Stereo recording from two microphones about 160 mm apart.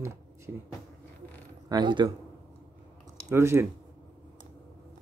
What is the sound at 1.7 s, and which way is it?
Speech, 30° right (ahead or behind).